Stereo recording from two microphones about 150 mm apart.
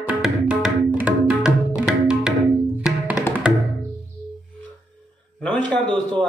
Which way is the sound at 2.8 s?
5° right (ahead or behind).